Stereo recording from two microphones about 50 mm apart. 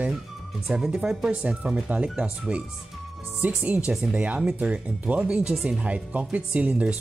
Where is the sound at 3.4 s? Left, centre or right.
Right.